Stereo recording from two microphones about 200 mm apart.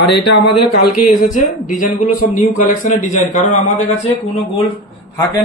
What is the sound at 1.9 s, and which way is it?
A man's voice, 50° left (ahead or behind).